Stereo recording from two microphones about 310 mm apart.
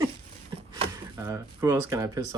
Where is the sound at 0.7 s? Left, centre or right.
Centre.